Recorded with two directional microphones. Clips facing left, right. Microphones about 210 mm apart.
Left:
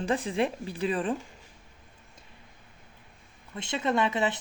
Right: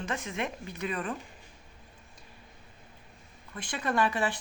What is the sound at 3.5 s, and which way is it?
Speech, 25° left (ahead or behind).